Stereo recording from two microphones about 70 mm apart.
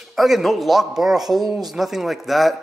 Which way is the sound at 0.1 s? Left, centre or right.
Centre.